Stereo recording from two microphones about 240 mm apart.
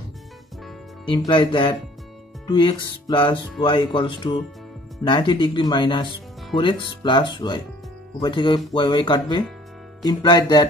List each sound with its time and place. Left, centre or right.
1.0 s speech: centre